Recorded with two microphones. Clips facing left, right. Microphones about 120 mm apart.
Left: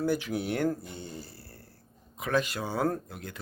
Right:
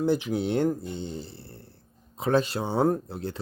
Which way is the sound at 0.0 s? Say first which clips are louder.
Right 4 dB; 20° right (ahead or behind).